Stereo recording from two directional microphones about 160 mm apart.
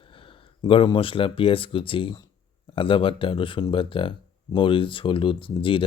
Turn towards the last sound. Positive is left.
turn(degrees=30)  # may be behind; listen again after turning